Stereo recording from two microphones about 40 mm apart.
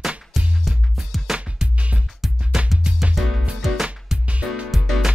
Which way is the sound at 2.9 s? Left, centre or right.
Centre.